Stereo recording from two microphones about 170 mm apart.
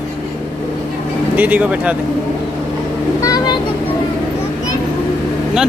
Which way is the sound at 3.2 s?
20° left (ahead or behind).